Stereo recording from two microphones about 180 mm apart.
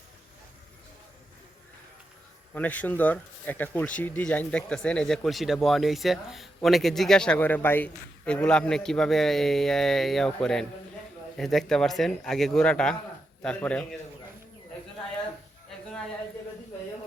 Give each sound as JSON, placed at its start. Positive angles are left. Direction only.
{"t": 2.6, "sound": "speech", "side_deg": 10}